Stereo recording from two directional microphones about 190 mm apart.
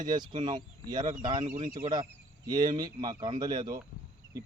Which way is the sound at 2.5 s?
20° right (ahead or behind).